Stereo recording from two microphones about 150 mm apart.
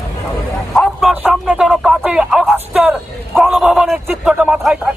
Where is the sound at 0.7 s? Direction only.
5° left (ahead or behind).